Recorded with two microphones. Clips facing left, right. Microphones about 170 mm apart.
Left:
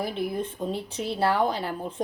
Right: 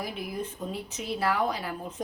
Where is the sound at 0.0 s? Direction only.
30° left (ahead or behind).